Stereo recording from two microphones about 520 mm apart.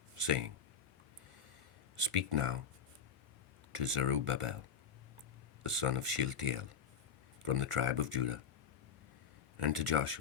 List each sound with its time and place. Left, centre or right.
0.3 s speech: right
2.0 s speech: right
3.8 s speech: right
5.7 s speech: right
9.6 s speech: right